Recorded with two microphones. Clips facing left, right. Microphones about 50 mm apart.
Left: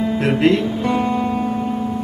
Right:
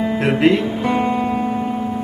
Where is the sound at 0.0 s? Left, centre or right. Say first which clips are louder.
Right 1 dB; centre.